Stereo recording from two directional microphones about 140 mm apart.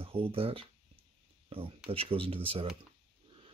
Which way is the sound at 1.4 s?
40° right (ahead or behind).